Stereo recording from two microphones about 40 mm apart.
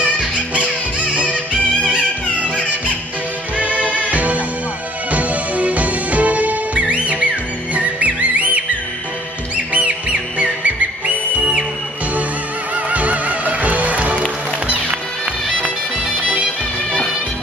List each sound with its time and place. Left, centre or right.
3.5 s music: right
9.7 s music: right
12.7 s music: right